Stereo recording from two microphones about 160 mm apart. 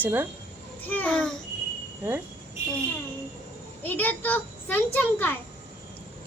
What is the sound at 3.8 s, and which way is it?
A child's voice, 10° left (ahead or behind).